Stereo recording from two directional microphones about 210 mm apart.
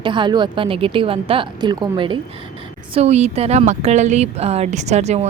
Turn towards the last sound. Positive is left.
turn(degrees=-30)  # may be behind; listen again after turning